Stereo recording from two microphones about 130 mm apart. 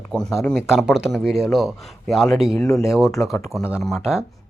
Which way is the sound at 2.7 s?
20° left (ahead or behind).